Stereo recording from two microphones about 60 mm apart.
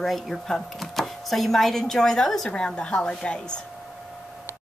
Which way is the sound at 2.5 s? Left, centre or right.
Centre.